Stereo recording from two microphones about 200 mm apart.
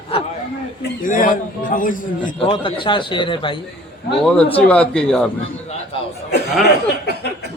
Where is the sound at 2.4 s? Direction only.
25° left (ahead or behind).